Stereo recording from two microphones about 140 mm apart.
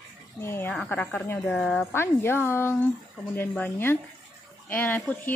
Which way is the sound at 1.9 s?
15° left (ahead or behind).